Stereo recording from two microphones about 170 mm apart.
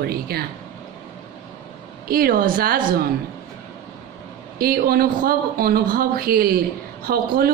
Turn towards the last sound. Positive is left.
turn(degrees=-60)  # may be behind; listen again after turning